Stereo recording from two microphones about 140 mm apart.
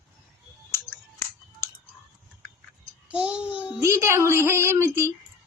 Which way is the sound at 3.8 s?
20° right (ahead or behind).